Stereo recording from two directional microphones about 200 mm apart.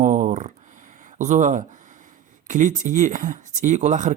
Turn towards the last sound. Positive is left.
turn(degrees=-35)  # may be behind; listen again after turning